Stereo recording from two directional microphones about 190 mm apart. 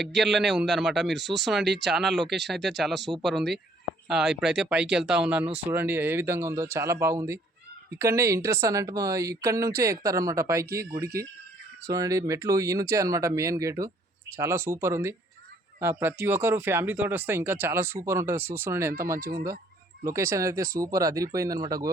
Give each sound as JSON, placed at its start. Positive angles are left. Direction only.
{"t": 0.2, "sound": "a man's voice", "side_deg": 0}